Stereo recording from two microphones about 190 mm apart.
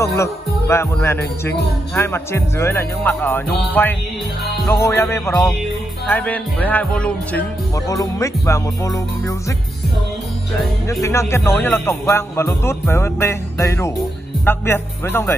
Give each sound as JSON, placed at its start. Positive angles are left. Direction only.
{"t": 0.0, "sound": "music", "side_deg": 15}
{"t": 7.9, "sound": "music", "side_deg": 15}
{"t": 10.9, "sound": "music", "side_deg": 15}